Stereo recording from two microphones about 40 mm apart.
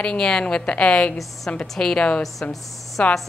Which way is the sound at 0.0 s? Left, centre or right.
Left.